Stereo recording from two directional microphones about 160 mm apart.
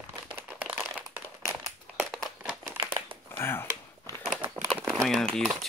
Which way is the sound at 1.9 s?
Centre (ahead or behind).